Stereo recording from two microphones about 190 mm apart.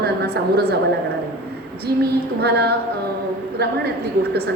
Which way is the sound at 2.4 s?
60° right (ahead or behind).